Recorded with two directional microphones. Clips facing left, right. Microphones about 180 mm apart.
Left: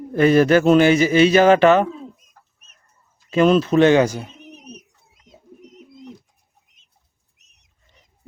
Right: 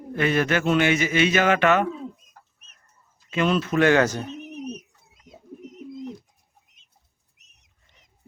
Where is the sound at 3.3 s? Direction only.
35° left (ahead or behind); by 4.3 s 10° left (ahead or behind).